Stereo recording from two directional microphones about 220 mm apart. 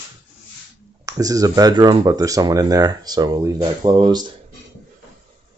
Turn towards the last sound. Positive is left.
turn(degrees=-20)  # may be behind; listen again after turning